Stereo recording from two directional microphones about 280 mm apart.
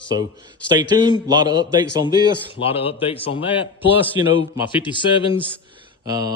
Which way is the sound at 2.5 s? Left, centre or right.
Centre.